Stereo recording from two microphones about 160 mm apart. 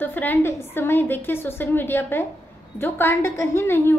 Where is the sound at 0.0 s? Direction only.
10° left (ahead or behind).